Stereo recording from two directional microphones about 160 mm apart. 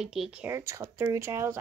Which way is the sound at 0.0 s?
5° right (ahead or behind).